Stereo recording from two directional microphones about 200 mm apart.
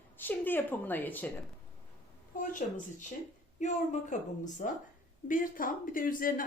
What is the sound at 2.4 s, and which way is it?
Speech, 40° left (ahead or behind).